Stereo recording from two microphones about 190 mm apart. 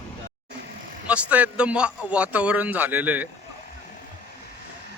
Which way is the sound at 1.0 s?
5° right (ahead or behind).